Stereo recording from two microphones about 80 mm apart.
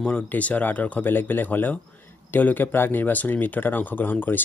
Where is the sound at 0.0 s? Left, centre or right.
Centre.